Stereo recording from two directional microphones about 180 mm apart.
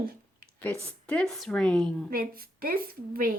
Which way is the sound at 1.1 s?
5° left (ahead or behind).